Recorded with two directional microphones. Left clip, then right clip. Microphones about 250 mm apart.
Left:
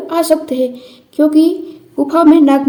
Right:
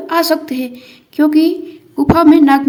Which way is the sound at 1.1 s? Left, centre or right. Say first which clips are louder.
Left 1 dB; right.